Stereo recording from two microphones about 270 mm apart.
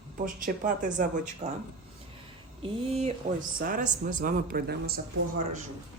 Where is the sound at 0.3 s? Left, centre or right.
Right.